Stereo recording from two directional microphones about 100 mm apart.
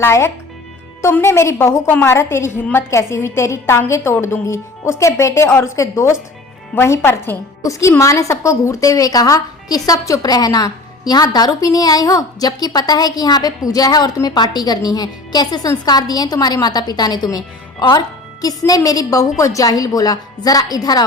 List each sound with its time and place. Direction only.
0.0 s a woman's voice: 25° left (ahead or behind)